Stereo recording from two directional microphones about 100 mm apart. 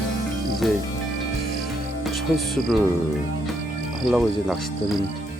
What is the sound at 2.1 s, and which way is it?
Speech, centre (ahead or behind).